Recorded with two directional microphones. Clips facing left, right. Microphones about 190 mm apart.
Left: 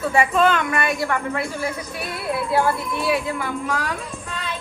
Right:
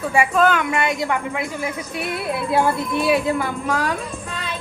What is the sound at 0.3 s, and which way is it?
Speech, 5° right (ahead or behind).